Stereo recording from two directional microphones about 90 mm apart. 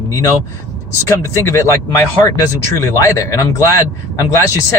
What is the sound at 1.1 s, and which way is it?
Speech, 30° left (ahead or behind).